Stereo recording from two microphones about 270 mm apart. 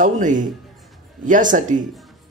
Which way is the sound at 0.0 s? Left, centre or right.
Right.